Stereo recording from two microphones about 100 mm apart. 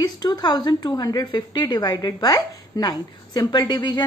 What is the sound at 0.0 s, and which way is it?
A woman's voice, 45° left (ahead or behind).